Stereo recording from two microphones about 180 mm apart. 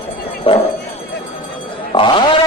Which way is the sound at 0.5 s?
30° left (ahead or behind).